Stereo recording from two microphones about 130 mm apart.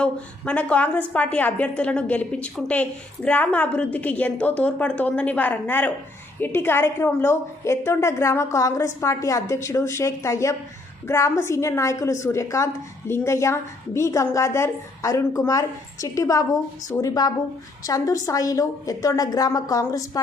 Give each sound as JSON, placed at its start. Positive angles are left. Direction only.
{"t": 0.0, "sound": "a woman's voice", "side_deg": 10}